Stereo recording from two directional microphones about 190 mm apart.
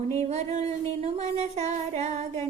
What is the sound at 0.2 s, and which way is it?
Music, 35° right (ahead or behind).